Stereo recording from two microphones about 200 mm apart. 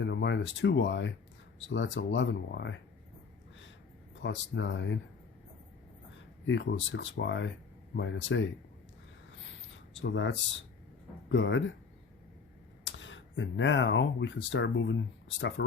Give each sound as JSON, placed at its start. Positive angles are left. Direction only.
{"t": 0.0, "sound": "speech", "side_deg": 60}
{"t": 4.1, "sound": "speech", "side_deg": 65}
{"t": 6.4, "sound": "speech", "side_deg": 65}
{"t": 9.7, "sound": "speech", "side_deg": 70}
{"t": 12.8, "sound": "speech", "side_deg": 70}